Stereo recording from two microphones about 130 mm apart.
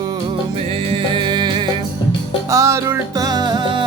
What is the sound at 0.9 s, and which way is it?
Music, 35° right (ahead or behind).